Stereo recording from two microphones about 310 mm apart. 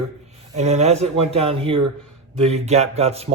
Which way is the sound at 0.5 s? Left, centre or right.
Right.